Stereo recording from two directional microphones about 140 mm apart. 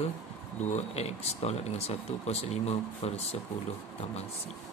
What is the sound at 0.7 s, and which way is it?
Speech, 50° left (ahead or behind).